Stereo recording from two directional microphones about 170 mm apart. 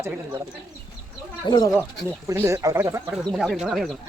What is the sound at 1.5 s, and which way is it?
Speech, 25° left (ahead or behind).